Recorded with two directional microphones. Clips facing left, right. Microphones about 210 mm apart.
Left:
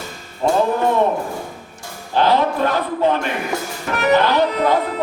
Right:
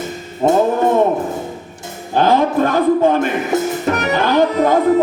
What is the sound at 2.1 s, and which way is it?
Music, 45° right (ahead or behind).